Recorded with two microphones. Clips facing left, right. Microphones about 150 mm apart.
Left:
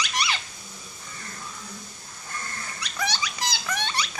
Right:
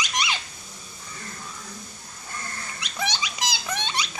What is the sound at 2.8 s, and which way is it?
Dog, 20° right (ahead or behind).